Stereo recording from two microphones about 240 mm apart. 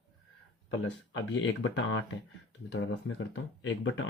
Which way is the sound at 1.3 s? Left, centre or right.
Left.